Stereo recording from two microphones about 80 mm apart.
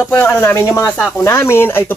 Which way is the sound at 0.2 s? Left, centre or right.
Left.